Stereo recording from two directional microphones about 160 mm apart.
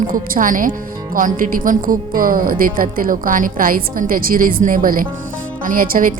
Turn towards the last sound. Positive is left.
turn(degrees=-60)  # may be behind; listen again after turning